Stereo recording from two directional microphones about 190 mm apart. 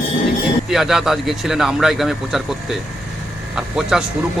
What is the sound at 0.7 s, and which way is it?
A man's voice, centre (ahead or behind).